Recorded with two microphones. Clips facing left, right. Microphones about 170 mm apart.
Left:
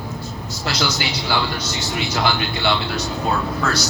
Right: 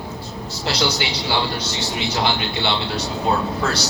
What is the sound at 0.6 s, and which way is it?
Speech, 30° right (ahead or behind).